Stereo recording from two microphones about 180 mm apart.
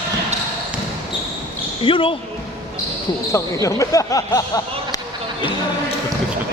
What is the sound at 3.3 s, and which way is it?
Speech, 15° left (ahead or behind).